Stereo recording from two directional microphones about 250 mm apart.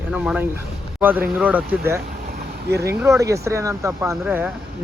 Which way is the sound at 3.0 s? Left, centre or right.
Centre.